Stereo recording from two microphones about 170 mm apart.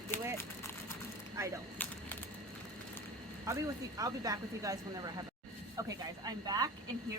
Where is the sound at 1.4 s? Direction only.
15° right (ahead or behind).